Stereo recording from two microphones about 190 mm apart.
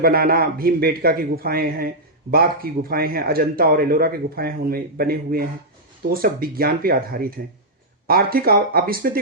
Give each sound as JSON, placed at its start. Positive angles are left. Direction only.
{"t": 0.0, "sound": "a man's voice", "side_deg": -50}